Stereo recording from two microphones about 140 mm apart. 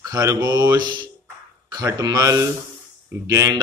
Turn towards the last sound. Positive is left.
turn(degrees=-25)  # may be behind; listen again after turning